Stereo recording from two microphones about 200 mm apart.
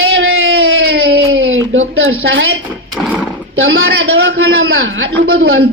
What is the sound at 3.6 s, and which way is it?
A man's voice, 70° right (ahead or behind).